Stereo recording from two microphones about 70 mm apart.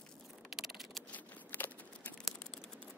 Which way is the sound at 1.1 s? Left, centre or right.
Left.